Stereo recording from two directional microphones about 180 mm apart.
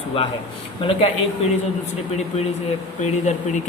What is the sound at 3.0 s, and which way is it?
Speech, 40° left (ahead or behind).